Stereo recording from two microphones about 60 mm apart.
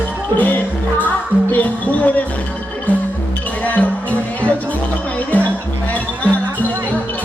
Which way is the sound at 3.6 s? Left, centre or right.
Left.